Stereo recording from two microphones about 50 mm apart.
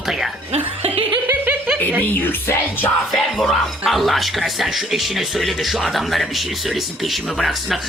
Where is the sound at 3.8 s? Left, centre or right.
Centre.